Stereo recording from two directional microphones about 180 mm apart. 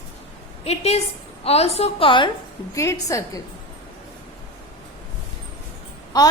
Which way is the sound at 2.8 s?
15° left (ahead or behind).